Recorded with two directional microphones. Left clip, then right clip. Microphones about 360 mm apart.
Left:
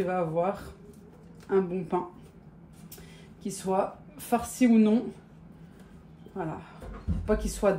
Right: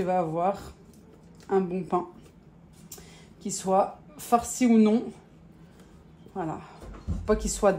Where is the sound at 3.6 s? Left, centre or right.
Right.